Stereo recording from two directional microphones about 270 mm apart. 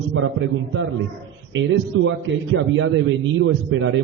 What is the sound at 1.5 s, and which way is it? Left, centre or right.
A man's voice, right.